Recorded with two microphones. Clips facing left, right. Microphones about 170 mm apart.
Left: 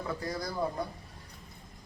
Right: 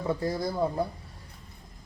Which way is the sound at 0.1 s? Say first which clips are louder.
Right 8 dB; 25° right (ahead or behind).